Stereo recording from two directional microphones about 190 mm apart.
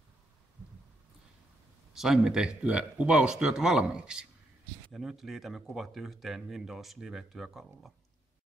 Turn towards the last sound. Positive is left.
turn(degrees=0)  # may be behind; listen again after turning